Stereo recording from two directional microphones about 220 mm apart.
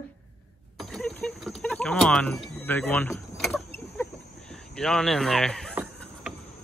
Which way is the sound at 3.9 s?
5° left (ahead or behind).